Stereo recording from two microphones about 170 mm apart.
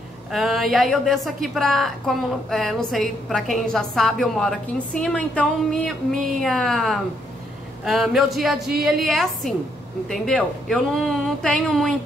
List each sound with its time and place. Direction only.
0.3 s a woman's voice: centre (ahead or behind)